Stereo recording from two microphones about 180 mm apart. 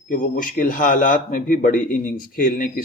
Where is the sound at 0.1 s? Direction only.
45° left (ahead or behind).